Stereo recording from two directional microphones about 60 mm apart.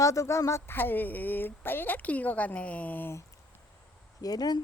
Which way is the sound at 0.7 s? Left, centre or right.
Left.